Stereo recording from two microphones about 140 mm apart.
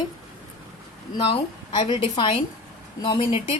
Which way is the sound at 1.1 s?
35° left (ahead or behind).